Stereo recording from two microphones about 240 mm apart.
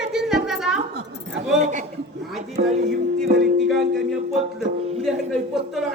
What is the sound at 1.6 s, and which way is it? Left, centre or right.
A man's voice, right.